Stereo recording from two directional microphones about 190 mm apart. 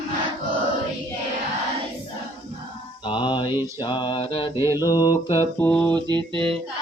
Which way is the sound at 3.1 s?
25° left (ahead or behind).